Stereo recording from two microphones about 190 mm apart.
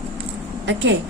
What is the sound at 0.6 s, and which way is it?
Speech, 70° right (ahead or behind).